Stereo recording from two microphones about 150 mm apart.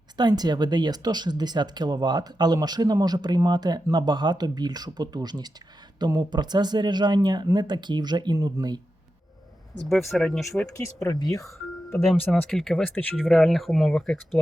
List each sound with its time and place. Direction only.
0.2 s speech: 30° right (ahead or behind)
9.8 s speech: centre (ahead or behind)
10.7 s speech: 20° left (ahead or behind)
12.3 s speech: 5° left (ahead or behind)